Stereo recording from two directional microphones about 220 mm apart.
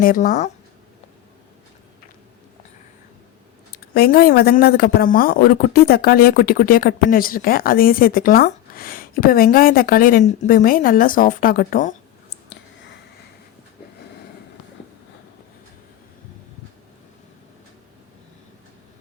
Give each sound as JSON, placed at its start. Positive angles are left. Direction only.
{"t": 0.0, "sound": "speech", "side_deg": 40}
{"t": 3.9, "sound": "speech", "side_deg": 45}